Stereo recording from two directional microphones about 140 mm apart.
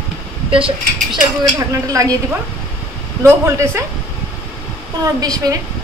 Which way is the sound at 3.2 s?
20° right (ahead or behind).